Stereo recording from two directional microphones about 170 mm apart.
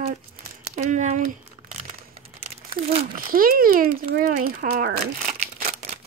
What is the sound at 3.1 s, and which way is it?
Speech, 55° right (ahead or behind).